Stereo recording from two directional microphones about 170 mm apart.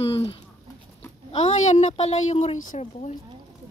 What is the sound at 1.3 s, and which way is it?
A woman's voice, 40° left (ahead or behind).